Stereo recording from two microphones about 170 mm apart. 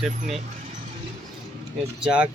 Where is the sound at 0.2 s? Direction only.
40° right (ahead or behind).